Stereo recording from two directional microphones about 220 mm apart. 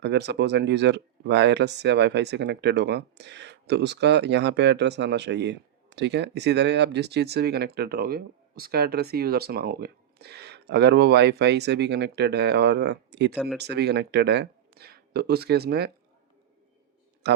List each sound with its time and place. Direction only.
0.0 s speech: 50° right (ahead or behind)
13.3 s speech: centre (ahead or behind)
13.6 s speech: 50° right (ahead or behind)
17.2 s speech: 50° right (ahead or behind)